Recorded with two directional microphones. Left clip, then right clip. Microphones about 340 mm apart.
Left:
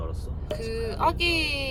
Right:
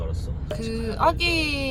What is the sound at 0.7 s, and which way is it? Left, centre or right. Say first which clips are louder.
Speech: even; right.